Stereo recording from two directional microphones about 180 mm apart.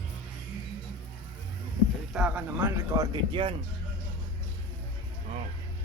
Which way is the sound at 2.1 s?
5° right (ahead or behind).